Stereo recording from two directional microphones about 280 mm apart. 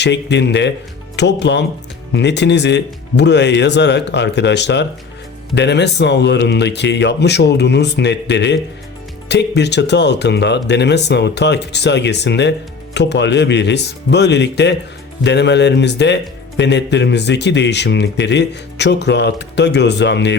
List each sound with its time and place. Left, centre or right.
0.0 s speech: left